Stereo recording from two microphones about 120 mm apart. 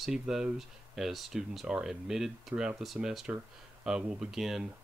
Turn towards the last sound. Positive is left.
turn(degrees=-5)  # may be behind; listen again after turning